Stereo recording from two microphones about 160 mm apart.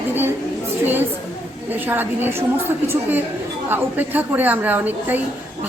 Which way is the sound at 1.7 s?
10° right (ahead or behind).